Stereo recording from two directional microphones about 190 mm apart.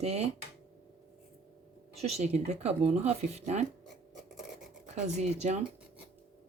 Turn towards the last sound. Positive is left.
turn(degrees=-35)  # may be behind; listen again after turning